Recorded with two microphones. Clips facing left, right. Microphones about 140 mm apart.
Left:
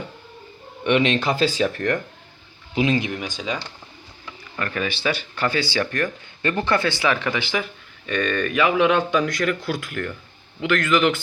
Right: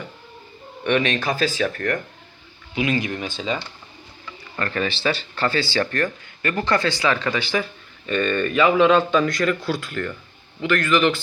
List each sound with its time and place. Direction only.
0.9 s speech: 25° left (ahead or behind)
3.1 s speech: 15° left (ahead or behind)
4.5 s speech: 5° left (ahead or behind)